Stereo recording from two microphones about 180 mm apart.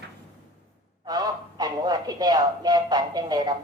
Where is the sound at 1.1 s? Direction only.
20° right (ahead or behind).